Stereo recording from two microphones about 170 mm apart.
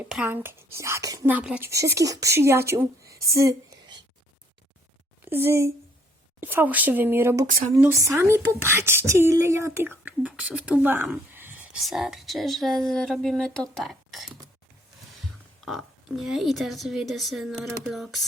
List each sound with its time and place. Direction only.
0.0 s speech: 10° right (ahead or behind)
1.7 s a woman's voice: 20° right (ahead or behind)
5.2 s a woman's voice: 15° right (ahead or behind)
15.6 s speech: centre (ahead or behind)